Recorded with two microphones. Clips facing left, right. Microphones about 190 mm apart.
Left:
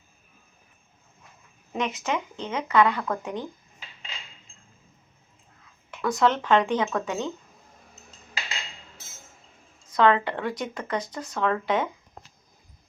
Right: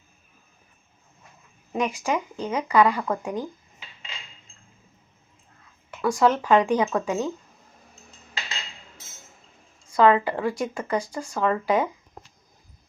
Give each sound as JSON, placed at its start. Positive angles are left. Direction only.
{"t": 1.7, "sound": "speech", "side_deg": -10}
{"t": 5.9, "sound": "speech", "side_deg": -10}
{"t": 9.9, "sound": "speech", "side_deg": -5}